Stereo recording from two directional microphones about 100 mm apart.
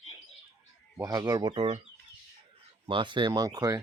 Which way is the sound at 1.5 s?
75° right (ahead or behind).